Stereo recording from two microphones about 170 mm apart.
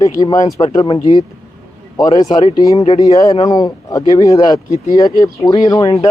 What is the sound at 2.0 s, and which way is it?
Speech, 20° left (ahead or behind).